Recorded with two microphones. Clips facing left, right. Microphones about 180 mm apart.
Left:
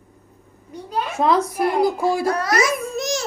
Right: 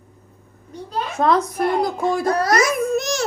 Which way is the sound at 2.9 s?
60° right (ahead or behind).